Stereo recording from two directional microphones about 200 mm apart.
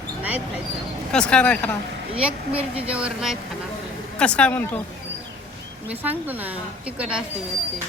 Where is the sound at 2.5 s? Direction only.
30° right (ahead or behind).